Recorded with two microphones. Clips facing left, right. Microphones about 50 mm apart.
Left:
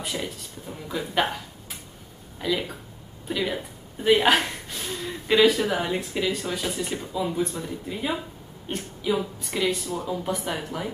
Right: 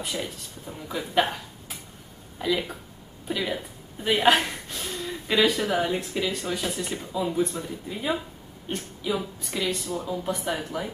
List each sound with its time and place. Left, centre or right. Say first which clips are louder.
0.0 s a woman's voice: left 1 dB; centre
2.3 s a woman's voice: even; centre